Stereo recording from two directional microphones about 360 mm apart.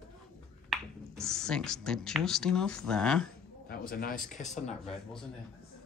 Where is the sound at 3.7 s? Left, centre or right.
Left.